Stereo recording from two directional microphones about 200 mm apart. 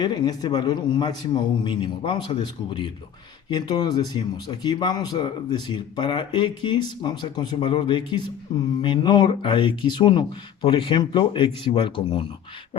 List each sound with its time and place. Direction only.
0.0 s speech: 20° left (ahead or behind)